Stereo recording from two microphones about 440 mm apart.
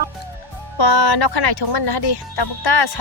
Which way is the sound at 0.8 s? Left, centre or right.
Left.